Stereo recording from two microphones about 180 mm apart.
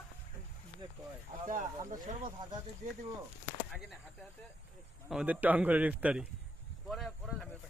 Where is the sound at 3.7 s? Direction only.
Centre (ahead or behind).